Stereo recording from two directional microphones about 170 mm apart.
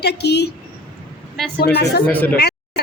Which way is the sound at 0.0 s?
75° left (ahead or behind).